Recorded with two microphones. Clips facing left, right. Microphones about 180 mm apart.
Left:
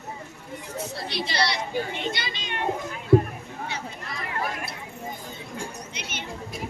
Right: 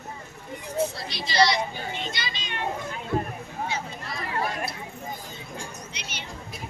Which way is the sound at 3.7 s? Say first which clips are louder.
Right 2 dB; 65° left (ahead or behind).